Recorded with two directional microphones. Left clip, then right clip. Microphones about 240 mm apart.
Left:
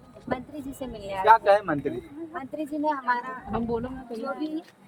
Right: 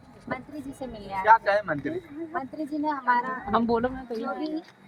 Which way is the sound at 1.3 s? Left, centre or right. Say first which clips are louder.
Left 2 dB; left.